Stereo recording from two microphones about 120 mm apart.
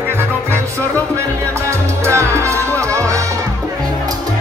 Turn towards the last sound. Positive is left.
turn(degrees=-25)  # may be behind; listen again after turning